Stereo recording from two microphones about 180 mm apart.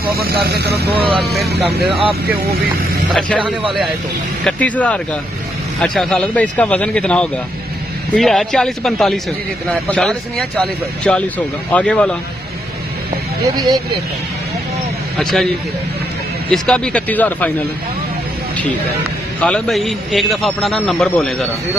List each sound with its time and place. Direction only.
0.0 s speech: 55° right (ahead or behind)
0.9 s speech: 30° right (ahead or behind)
4.5 s a man's voice: 10° left (ahead or behind)
15.1 s speech: centre (ahead or behind)
16.4 s a man's voice: 5° left (ahead or behind)
19.4 s speech: 5° left (ahead or behind)